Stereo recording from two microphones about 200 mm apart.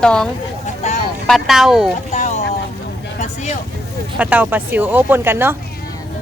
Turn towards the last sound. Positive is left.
turn(degrees=-10)  # may be behind; listen again after turning